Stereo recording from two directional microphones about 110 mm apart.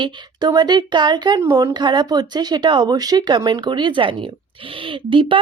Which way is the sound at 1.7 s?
40° right (ahead or behind).